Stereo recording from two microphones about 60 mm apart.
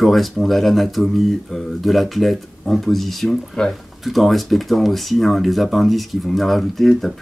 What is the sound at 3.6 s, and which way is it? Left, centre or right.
Speech, centre.